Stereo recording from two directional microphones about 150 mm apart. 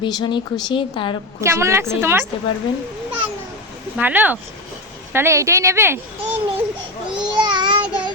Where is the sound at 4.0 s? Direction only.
10° right (ahead or behind).